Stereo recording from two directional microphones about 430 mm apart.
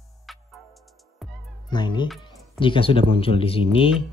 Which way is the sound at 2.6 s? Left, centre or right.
Centre.